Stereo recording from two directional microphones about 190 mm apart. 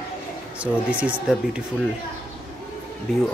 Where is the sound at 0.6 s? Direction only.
5° right (ahead or behind).